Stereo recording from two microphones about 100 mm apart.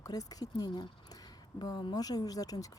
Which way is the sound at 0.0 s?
35° left (ahead or behind).